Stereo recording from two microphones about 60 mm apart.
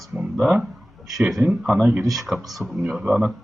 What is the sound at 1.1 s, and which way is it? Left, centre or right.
Speech, centre.